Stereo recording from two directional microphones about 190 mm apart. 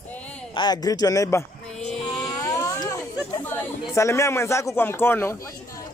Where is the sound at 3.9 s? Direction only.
15° left (ahead or behind).